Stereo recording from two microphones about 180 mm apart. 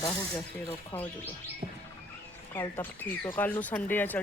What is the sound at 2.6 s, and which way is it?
Speech, 10° left (ahead or behind).